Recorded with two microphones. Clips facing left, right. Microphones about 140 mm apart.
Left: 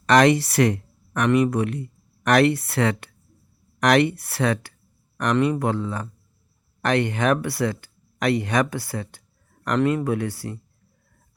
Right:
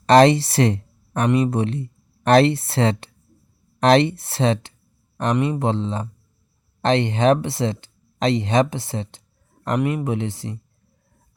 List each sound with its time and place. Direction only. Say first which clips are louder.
0.0 s speech: right 3 dB; 30° right (ahead or behind)